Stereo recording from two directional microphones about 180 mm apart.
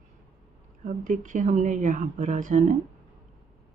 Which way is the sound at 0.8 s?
45° right (ahead or behind).